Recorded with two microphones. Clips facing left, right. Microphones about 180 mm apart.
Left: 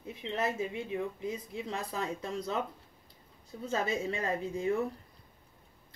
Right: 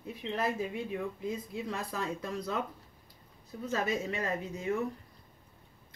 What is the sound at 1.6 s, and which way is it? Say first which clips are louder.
Speech: left 1 dB; 25° left (ahead or behind).